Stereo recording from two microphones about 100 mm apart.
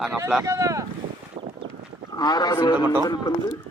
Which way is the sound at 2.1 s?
40° left (ahead or behind).